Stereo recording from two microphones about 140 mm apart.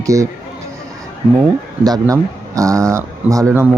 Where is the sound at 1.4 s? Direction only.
25° right (ahead or behind).